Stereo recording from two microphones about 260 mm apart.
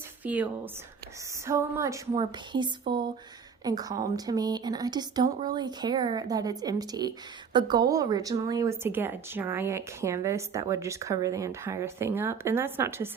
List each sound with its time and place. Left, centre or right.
0.3 s speech: centre